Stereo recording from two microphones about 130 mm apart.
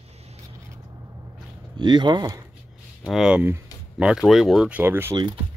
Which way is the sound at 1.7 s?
35° right (ahead or behind).